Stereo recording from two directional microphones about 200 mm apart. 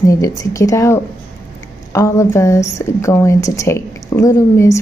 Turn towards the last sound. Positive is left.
turn(degrees=15)  # may be behind; listen again after turning